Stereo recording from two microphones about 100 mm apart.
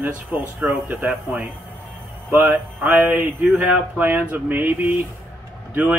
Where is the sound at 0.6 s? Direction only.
10° right (ahead or behind).